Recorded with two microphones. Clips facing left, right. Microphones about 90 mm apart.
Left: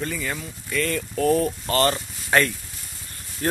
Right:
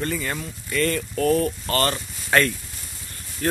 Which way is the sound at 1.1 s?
20° left (ahead or behind).